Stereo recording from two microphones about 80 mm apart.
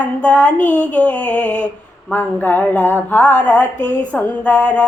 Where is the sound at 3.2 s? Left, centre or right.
Centre.